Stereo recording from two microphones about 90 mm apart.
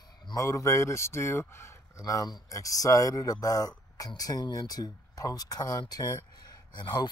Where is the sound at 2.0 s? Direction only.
45° left (ahead or behind).